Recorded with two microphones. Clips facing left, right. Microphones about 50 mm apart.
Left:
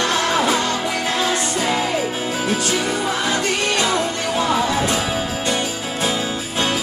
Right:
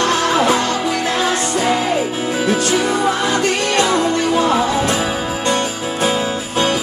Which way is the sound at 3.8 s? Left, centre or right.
Right.